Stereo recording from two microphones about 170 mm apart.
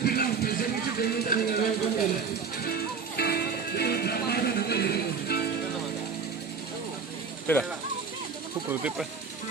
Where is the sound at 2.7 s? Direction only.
70° left (ahead or behind).